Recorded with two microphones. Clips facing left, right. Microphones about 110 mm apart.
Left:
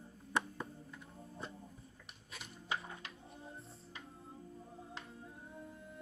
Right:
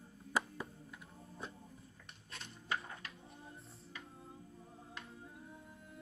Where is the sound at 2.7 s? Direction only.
25° left (ahead or behind).